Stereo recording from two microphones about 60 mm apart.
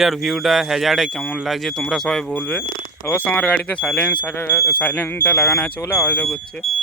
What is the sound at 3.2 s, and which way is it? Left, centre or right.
Speech, left.